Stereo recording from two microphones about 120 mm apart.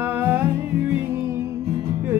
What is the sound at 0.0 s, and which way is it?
Music, 20° right (ahead or behind).